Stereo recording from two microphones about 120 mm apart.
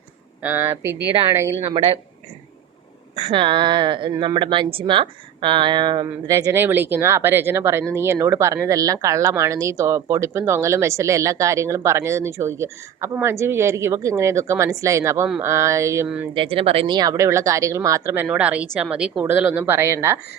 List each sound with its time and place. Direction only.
0.4 s speech: 20° right (ahead or behind)
1.7 s speech: 50° right (ahead or behind)
3.2 s a woman's voice: 45° right (ahead or behind); by 16.0 s 25° right (ahead or behind)
16.0 s a woman's voice: 10° right (ahead or behind)
16.3 s speech: 45° right (ahead or behind)
16.9 s speech: 30° right (ahead or behind)
18.3 s a woman's voice: 10° right (ahead or behind)